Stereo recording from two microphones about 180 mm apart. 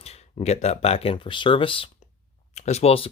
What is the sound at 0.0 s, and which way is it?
Speech, 35° left (ahead or behind).